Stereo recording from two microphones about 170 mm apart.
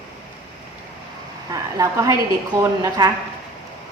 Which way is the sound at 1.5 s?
20° right (ahead or behind).